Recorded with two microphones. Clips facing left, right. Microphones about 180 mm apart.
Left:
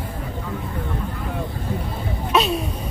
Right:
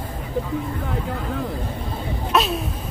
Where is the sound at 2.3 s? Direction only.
Centre (ahead or behind).